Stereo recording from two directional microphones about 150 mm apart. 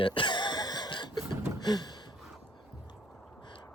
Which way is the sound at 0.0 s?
35° left (ahead or behind).